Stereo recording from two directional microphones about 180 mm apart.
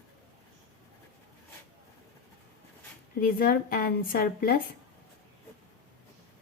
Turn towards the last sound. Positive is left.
turn(degrees=55)  # may be behind; listen again after turning